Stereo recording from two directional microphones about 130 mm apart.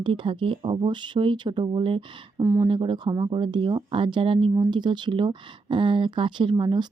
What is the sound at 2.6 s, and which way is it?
Speech, 40° right (ahead or behind).